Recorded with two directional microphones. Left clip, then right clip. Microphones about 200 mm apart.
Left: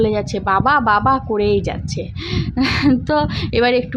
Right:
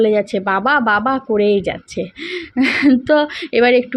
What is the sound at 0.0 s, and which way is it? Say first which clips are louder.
Speech: right 3 dB; 5° right (ahead or behind).